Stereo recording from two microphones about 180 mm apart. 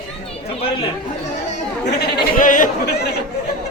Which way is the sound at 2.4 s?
45° left (ahead or behind).